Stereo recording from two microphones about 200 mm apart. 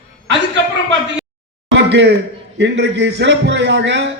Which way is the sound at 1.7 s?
60° right (ahead or behind).